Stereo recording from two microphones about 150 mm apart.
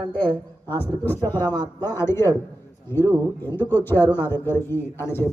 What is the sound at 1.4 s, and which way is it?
Speech, 30° right (ahead or behind).